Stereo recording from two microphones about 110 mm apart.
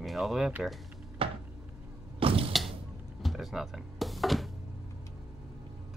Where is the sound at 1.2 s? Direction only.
55° right (ahead or behind).